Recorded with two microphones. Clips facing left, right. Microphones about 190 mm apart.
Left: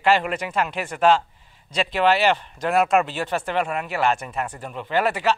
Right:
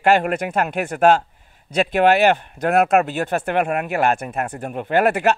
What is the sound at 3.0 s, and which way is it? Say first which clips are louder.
A man's voice: right 3 dB; 50° right (ahead or behind).